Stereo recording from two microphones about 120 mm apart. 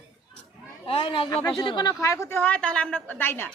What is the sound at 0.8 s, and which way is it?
Speech, 50° left (ahead or behind).